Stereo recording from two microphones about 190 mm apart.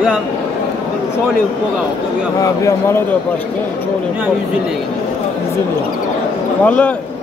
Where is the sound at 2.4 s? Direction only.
20° left (ahead or behind).